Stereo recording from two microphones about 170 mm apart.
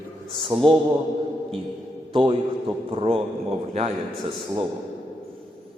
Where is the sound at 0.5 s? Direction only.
30° right (ahead or behind).